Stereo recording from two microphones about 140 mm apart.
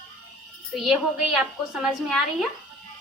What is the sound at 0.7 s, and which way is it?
A woman's voice, 5° right (ahead or behind).